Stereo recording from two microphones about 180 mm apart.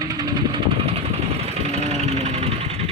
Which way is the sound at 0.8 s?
35° right (ahead or behind).